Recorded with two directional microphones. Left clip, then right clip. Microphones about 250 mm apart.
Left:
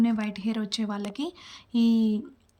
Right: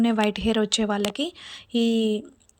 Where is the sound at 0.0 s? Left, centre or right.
Centre.